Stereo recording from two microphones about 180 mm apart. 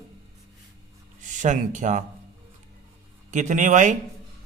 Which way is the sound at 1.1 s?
45° right (ahead or behind).